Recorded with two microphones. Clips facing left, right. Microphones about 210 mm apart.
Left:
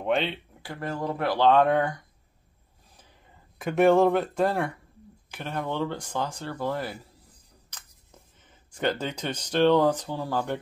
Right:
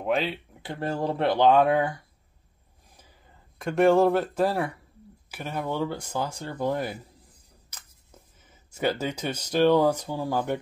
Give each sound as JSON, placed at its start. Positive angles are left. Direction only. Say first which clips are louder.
{"t": 0.0, "sound": "speech", "louder": "even", "side_deg": 0}
{"t": 0.6, "sound": "speech", "louder": "right 3 dB", "side_deg": -25}
{"t": 1.5, "sound": "speech", "louder": "even", "side_deg": -5}
{"t": 3.5, "sound": "speech", "louder": "even", "side_deg": 0}